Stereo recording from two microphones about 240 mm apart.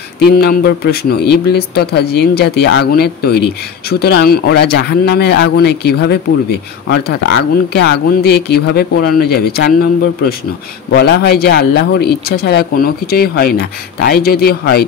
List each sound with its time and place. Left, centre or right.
0.2 s speech: left
10.9 s speech: left